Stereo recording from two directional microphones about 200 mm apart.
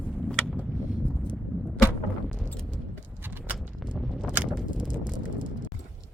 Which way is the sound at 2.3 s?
5° left (ahead or behind).